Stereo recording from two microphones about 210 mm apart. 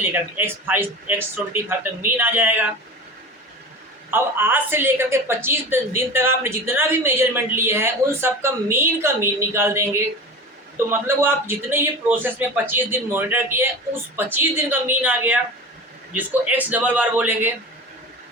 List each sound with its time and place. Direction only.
0.1 s a woman's voice: 10° right (ahead or behind)
4.1 s a woman's voice: 10° right (ahead or behind)
11.0 s a woman's voice: 10° right (ahead or behind)